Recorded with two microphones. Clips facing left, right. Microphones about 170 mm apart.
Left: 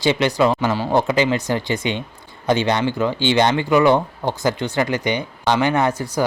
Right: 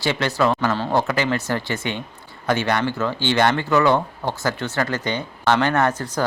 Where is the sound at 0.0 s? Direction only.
15° left (ahead or behind).